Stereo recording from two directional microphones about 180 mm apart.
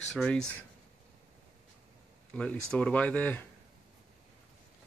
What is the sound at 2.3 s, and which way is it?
Speech, 5° left (ahead or behind).